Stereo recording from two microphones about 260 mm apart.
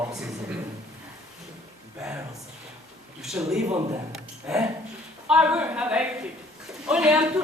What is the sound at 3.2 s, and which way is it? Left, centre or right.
A woman's voice, centre.